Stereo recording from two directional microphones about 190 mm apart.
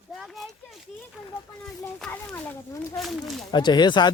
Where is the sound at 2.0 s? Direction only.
10° left (ahead or behind).